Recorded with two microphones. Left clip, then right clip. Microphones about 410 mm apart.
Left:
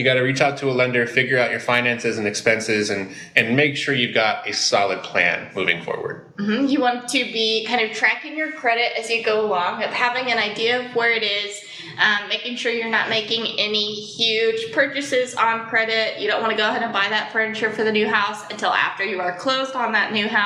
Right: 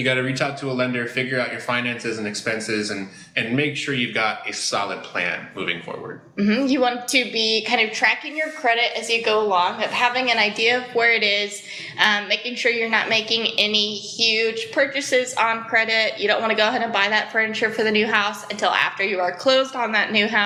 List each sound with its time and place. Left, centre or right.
0.0 s speech: left
6.5 s a woman's voice: right